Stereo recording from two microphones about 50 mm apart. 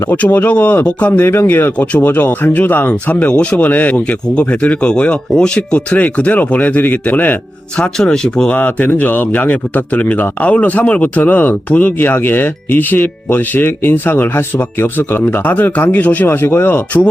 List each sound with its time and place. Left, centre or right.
0.3 s speech: left
1.2 s a man's voice: left
3.3 s speech: centre
3.6 s speech: left
7.8 s speech: centre
8.8 s speech: left
16.2 s a man's voice: left